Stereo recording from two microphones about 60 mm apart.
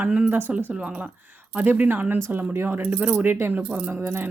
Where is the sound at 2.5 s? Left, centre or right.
Right.